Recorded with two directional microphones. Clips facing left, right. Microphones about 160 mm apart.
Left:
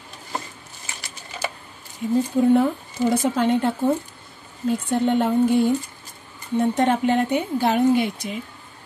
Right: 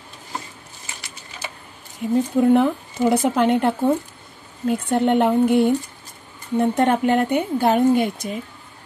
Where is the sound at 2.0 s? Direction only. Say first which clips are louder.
Right 1 dB; 60° right (ahead or behind).